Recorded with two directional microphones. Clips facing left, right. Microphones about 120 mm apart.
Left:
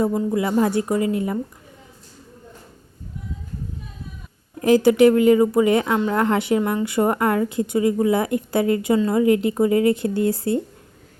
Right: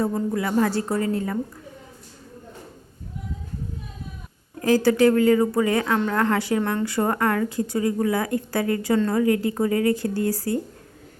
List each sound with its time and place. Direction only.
0.1 s a woman's voice: 5° left (ahead or behind)
0.3 s a woman's voice: 20° left (ahead or behind)
4.6 s speech: 20° left (ahead or behind)
6.6 s a woman's voice: 5° left (ahead or behind)
6.8 s speech: 20° left (ahead or behind)